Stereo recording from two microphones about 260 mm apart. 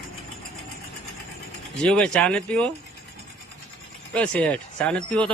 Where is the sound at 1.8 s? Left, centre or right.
Centre.